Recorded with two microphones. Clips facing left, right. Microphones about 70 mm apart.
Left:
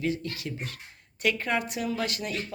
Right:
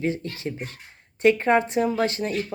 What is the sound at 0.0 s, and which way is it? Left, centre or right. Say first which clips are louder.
Speech: right 3 dB; right.